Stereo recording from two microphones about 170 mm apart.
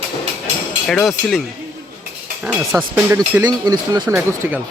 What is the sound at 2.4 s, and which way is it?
Speech, 5° right (ahead or behind).